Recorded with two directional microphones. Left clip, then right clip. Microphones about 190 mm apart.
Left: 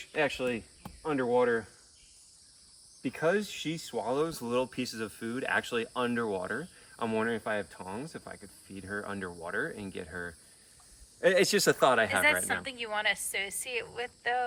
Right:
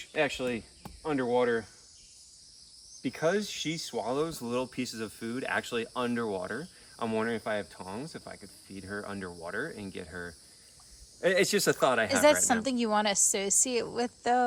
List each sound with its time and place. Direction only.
0.0 s speech: 5° right (ahead or behind)
3.0 s speech: 5° right (ahead or behind)
12.6 s a woman's voice: 30° right (ahead or behind)